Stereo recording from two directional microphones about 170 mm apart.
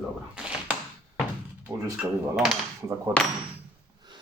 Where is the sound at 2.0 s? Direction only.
Centre (ahead or behind).